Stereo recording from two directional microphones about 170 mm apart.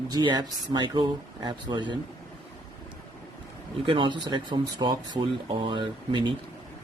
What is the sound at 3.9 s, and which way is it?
Speech, 30° right (ahead or behind).